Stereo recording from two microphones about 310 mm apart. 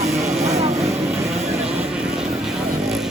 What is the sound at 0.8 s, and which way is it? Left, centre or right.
Vehicle, centre.